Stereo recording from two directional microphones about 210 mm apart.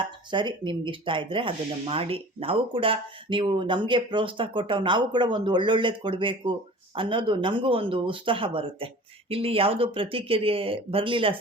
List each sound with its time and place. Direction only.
0.3 s speech: 20° right (ahead or behind)